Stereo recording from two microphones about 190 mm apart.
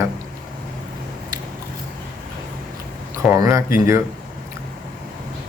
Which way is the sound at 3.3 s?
15° right (ahead or behind).